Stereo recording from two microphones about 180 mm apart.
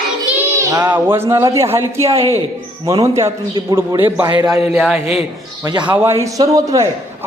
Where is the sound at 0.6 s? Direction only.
15° right (ahead or behind).